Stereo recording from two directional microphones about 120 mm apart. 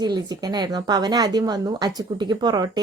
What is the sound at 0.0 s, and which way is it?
A woman's voice, 35° right (ahead or behind).